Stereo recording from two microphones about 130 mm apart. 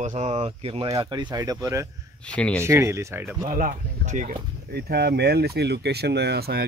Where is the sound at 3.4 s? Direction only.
90° right.